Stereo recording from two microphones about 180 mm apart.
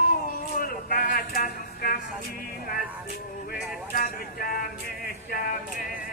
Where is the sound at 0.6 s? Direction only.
55° left (ahead or behind).